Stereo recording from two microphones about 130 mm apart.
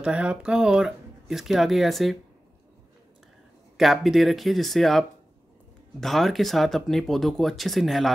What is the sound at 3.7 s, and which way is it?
Speech, centre (ahead or behind).